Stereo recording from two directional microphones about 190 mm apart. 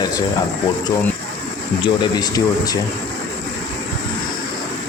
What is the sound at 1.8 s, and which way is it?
Speech, 25° left (ahead or behind).